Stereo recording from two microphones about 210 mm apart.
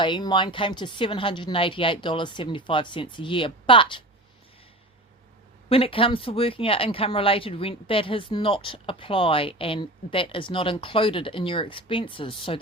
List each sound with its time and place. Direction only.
0.0 s speech: 20° left (ahead or behind)
5.6 s speech: 25° left (ahead or behind)